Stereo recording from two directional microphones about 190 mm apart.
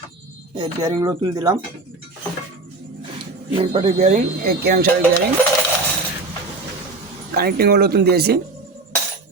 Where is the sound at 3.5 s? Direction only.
35° right (ahead or behind); by 4.8 s 55° right (ahead or behind).